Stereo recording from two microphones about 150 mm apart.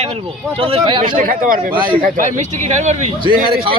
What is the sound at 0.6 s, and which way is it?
Speech, 35° right (ahead or behind).